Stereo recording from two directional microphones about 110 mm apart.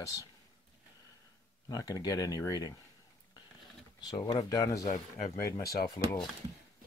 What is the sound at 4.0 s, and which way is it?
Speech, 40° left (ahead or behind).